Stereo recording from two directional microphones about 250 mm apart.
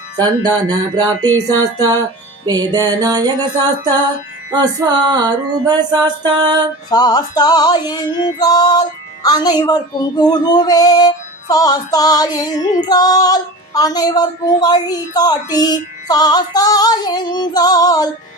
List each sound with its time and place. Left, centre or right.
0.2 s music: centre
4.5 s music: centre
6.9 s female singing: centre